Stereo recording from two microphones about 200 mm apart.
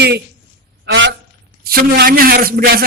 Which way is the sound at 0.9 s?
65° right (ahead or behind).